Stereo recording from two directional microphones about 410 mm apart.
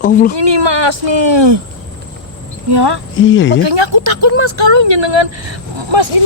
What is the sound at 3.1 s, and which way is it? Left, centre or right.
Speech, left.